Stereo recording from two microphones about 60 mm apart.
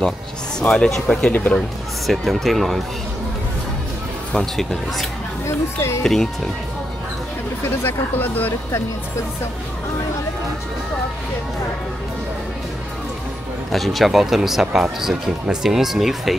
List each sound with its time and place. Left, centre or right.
0.6 s speech: centre
4.4 s speech: centre
5.8 s speech: left
6.0 s speech: centre
7.6 s speech: left
13.7 s speech: centre